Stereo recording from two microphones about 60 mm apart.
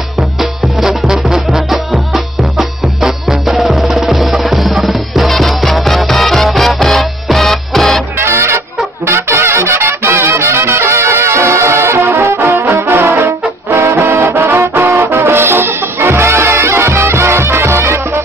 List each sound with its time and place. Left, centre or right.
0.4 s music: centre
8.2 s music: right